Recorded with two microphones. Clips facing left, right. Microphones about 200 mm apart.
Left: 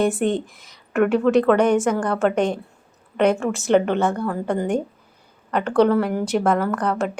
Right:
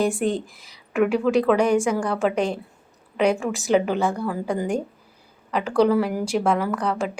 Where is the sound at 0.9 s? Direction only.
Centre (ahead or behind).